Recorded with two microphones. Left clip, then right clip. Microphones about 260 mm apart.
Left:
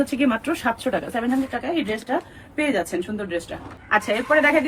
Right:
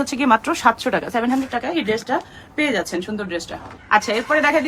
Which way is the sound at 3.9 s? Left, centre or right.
Centre.